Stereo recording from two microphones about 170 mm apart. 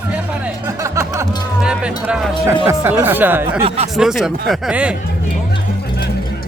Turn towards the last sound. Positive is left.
turn(degrees=-5)  # may be behind; listen again after turning